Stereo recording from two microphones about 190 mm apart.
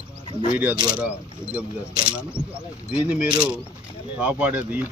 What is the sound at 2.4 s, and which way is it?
Speech, 20° right (ahead or behind).